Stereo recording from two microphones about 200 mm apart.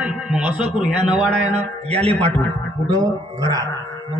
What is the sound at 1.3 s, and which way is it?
Speech, 35° right (ahead or behind).